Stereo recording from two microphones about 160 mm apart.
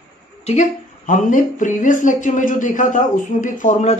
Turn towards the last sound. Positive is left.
turn(degrees=50)  # may be behind; listen again after turning